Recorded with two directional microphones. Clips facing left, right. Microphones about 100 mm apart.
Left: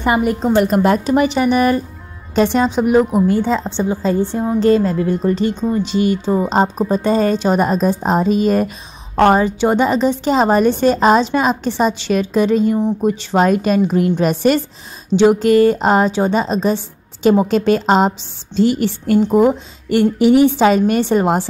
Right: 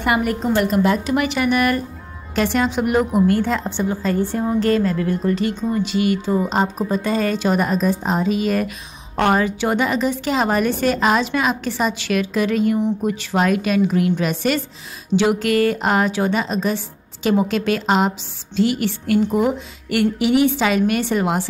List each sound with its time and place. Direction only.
0.0 s a woman's voice: 25° left (ahead or behind)
0.7 s a woman's voice: 45° left (ahead or behind)
1.0 s a woman's voice: 30° left (ahead or behind)
13.5 s a woman's voice: 35° left (ahead or behind)
15.1 s a woman's voice: 30° left (ahead or behind)